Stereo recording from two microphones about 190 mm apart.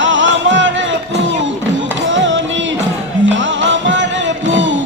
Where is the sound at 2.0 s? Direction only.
75° right (ahead or behind).